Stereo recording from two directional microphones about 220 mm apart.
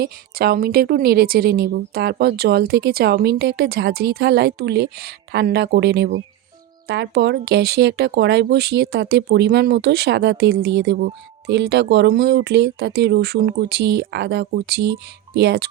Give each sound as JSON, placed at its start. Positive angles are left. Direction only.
{"t": 0.0, "sound": "speech", "side_deg": -45}